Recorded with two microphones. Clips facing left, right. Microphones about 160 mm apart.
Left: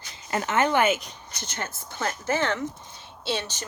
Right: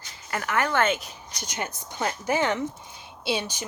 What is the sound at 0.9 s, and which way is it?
Speech, centre (ahead or behind).